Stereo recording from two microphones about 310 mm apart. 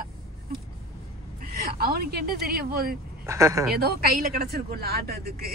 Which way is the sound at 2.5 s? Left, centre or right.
Right.